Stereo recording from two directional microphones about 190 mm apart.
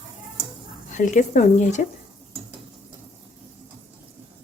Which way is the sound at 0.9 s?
40° left (ahead or behind).